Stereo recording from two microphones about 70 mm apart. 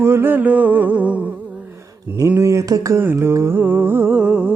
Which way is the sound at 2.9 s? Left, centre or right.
Right.